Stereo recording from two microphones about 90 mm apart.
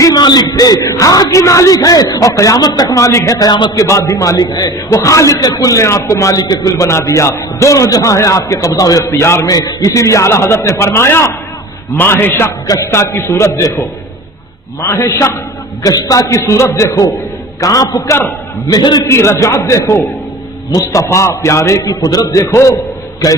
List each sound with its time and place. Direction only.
0.0 s a man's voice: 50° left (ahead or behind)
3.0 s a man's voice: 35° left (ahead or behind)
3.4 s a man's voice: 55° left (ahead or behind)
3.8 s a man's voice: 35° left (ahead or behind)
9.5 s a man's voice: 45° left (ahead or behind); by 12.5 s 30° left (ahead or behind)
12.6 s a man's voice: 40° left (ahead or behind)
14.8 s a man's voice: 35° left (ahead or behind)
15.8 s a man's voice: 45° left (ahead or behind)
19.1 s a man's voice: 30° left (ahead or behind)